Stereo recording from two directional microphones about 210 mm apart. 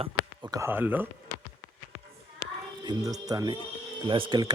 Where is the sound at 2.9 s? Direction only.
15° right (ahead or behind).